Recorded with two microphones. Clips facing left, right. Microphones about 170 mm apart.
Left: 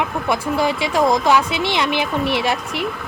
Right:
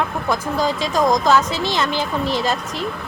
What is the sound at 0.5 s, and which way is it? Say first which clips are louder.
Speech: left 1 dB; 65° left (ahead or behind).